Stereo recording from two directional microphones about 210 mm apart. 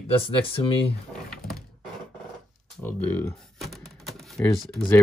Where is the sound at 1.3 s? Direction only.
Centre (ahead or behind).